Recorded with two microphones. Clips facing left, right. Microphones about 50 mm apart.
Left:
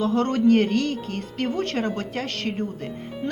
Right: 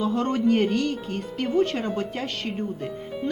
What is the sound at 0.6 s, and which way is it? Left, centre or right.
Speech, left.